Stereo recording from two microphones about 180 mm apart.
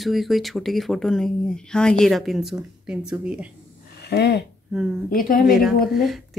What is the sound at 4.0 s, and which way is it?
Speech, 65° left (ahead or behind).